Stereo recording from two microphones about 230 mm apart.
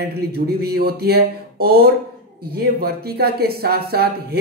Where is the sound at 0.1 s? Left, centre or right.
Right.